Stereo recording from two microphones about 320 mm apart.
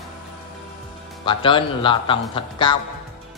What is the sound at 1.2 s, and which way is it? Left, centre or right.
A man's voice, centre.